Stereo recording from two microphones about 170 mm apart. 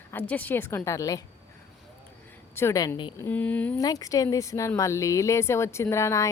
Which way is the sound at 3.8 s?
20° left (ahead or behind).